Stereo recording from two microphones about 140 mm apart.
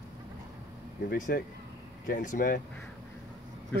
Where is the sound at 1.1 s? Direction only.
80° left.